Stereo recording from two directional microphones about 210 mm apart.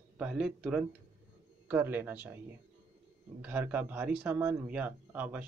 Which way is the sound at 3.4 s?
10° right (ahead or behind).